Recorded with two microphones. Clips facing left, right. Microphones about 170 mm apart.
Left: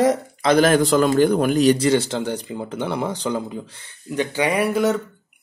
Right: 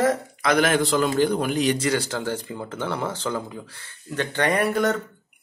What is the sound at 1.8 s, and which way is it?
Speech, 20° left (ahead or behind).